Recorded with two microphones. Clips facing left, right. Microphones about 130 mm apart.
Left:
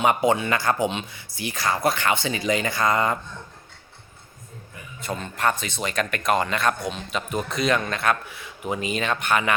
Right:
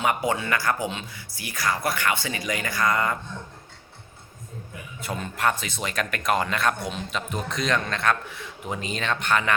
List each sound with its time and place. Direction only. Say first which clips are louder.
0.0 s speech: left 4 dB; 20° left (ahead or behind)
4.9 s speech: left 1 dB; 5° right (ahead or behind); by 9.6 s 10° left (ahead or behind)